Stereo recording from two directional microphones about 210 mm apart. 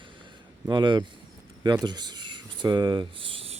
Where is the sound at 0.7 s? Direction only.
20° right (ahead or behind).